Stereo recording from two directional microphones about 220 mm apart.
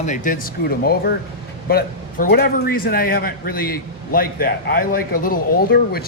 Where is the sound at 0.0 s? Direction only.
35° left (ahead or behind).